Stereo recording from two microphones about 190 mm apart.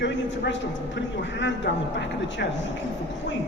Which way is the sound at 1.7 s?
65° left (ahead or behind).